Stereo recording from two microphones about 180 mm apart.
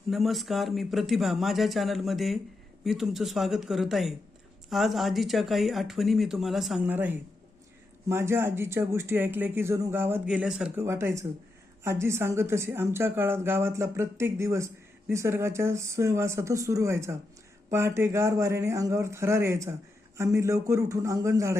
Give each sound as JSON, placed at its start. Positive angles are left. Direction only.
{"t": 0.1, "sound": "speech", "side_deg": 0}